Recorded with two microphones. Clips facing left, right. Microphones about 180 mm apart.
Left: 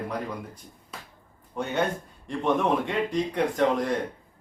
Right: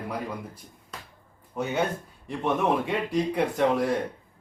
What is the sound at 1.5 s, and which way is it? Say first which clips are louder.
A man's voice: even; 5° right (ahead or behind).